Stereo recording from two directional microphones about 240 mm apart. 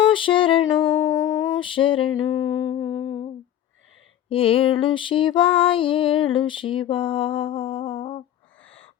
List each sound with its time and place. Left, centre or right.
0.0 s music: left
1.5 s female singing: left
4.3 s female singing: left